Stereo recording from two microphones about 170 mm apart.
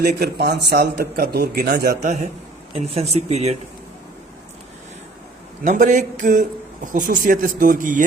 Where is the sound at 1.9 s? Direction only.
40° right (ahead or behind).